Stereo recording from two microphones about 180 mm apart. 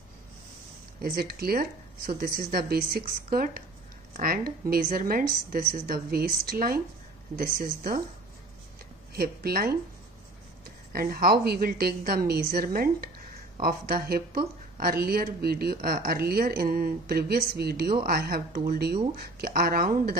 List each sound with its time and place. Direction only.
1.0 s speech: 55° right (ahead or behind)
9.1 s speech: 60° right (ahead or behind)
10.9 s speech: 55° right (ahead or behind)